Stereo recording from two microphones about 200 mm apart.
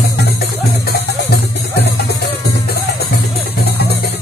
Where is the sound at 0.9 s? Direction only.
55° left (ahead or behind).